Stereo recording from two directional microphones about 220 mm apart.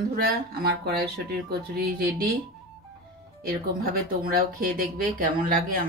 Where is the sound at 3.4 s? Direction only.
45° right (ahead or behind).